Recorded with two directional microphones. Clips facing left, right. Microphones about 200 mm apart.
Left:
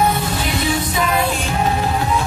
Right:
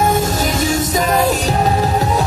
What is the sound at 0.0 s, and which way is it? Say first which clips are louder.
Music: right 3 dB; 45° right (ahead or behind).